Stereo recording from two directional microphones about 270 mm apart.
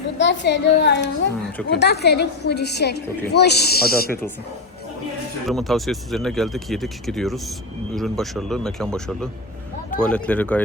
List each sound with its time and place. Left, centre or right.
0.2 s a woman's voice: left
5.5 s speech: centre